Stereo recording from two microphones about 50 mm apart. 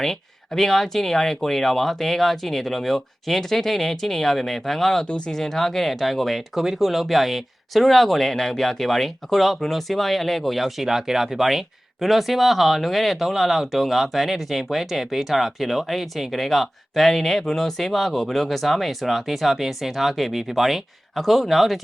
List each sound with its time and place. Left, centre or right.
0.0 s speech: centre
5.0 s speech: centre
5.4 s speech: centre